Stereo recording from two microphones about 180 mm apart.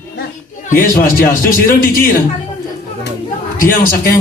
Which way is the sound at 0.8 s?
50° left (ahead or behind).